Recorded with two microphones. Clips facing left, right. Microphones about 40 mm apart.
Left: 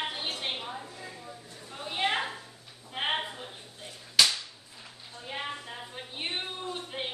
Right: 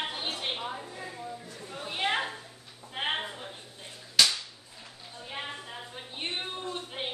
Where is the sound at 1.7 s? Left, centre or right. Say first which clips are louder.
Even; centre.